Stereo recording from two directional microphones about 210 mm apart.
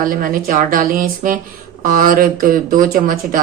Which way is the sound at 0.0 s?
40° right (ahead or behind).